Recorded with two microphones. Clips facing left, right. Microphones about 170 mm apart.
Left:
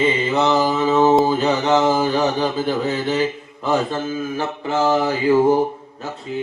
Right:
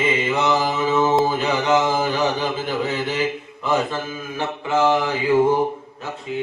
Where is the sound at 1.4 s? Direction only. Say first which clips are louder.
Left 2 dB; 35° left (ahead or behind).